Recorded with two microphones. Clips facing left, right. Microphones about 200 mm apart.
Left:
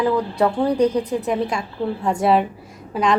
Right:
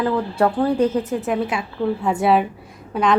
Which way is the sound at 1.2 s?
5° right (ahead or behind).